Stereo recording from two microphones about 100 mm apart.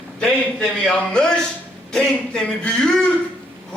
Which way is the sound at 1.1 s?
10° left (ahead or behind).